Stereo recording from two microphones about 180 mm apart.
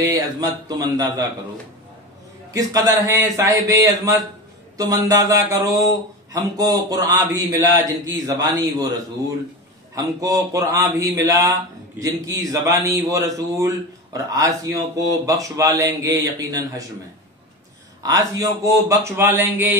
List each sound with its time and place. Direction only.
0.0 s a man's voice: 20° right (ahead or behind)
2.5 s a man's voice: 20° right (ahead or behind)
9.9 s a man's voice: 20° right (ahead or behind)
18.0 s speech: 20° right (ahead or behind)